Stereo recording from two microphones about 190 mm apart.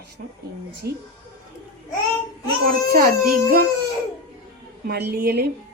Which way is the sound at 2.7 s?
50° right (ahead or behind).